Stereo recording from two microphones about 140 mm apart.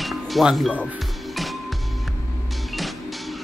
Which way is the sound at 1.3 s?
Centre (ahead or behind).